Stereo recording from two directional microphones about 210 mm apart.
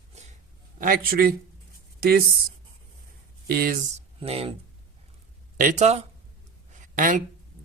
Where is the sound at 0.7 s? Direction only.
40° right (ahead or behind).